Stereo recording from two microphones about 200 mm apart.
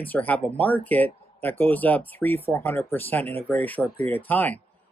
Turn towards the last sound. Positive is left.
turn(degrees=10)  # may be behind; listen again after turning